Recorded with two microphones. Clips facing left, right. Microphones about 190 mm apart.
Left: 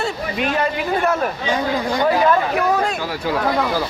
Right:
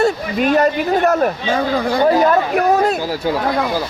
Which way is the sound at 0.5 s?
45° right (ahead or behind).